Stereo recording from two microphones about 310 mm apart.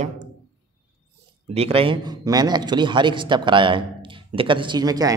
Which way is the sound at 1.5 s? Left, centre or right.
Centre.